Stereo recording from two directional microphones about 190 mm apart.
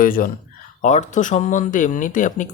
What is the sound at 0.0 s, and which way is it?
Speech, 50° left (ahead or behind).